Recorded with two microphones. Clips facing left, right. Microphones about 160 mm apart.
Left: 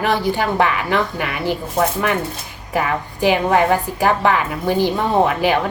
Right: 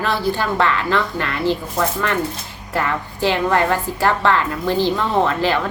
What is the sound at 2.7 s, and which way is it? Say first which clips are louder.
A woman's voice: left 2 dB; 15° left (ahead or behind).